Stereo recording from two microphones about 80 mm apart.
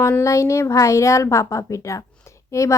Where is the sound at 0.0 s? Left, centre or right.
Left.